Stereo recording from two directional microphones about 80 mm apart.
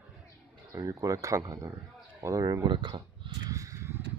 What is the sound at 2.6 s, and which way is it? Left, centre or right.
Speech, right.